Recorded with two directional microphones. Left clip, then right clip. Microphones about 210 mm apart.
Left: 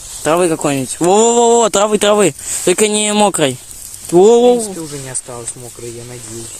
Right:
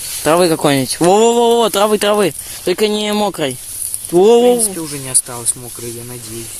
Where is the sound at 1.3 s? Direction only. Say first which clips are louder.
Left 1 dB; 30° left (ahead or behind).